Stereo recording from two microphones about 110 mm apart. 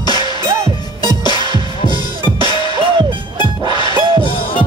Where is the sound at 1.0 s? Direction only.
40° left (ahead or behind).